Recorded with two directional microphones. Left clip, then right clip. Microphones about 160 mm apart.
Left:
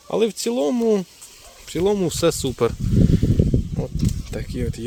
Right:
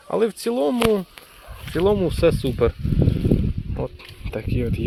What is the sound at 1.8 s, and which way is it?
Speech, 25° left (ahead or behind).